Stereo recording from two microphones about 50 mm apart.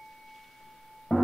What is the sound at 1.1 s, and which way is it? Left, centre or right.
Music, centre.